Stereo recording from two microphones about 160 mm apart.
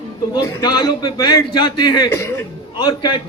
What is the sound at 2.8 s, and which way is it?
Speech, 30° left (ahead or behind).